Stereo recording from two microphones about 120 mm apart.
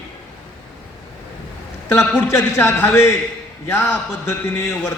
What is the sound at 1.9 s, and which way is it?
A man's voice, 20° left (ahead or behind).